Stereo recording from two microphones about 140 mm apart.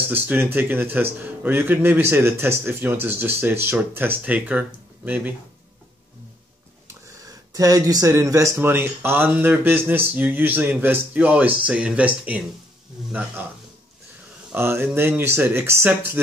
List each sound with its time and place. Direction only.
0.1 s speech: 15° right (ahead or behind)
6.9 s speech: 25° right (ahead or behind); by 13.1 s 5° right (ahead or behind)
14.5 s speech: 15° right (ahead or behind)